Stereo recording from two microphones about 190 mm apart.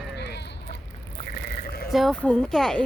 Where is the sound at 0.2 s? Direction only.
60° left (ahead or behind).